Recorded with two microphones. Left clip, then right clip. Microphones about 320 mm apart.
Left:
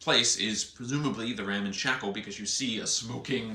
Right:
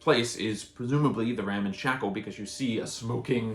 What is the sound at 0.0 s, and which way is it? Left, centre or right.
Speech, centre.